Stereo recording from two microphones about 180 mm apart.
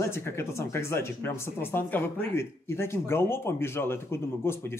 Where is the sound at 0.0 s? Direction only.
15° left (ahead or behind).